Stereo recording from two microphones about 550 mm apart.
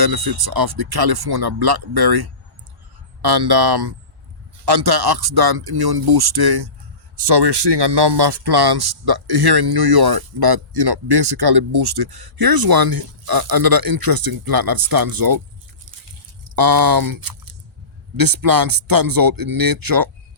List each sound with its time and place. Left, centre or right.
0.0 s speech: right
16.6 s speech: right